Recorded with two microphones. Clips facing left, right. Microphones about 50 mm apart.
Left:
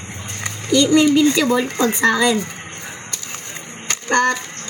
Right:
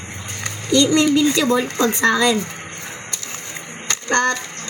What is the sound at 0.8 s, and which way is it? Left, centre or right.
Speech, centre.